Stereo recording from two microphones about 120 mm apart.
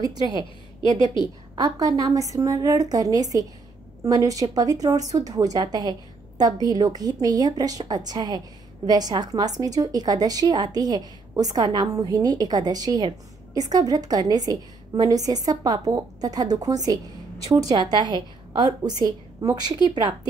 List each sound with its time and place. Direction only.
1.5 s a woman's voice: 30° right (ahead or behind)